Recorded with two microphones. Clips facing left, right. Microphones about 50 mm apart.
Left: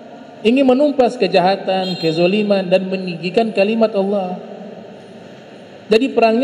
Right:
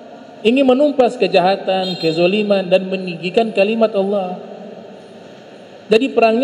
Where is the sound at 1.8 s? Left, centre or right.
Centre.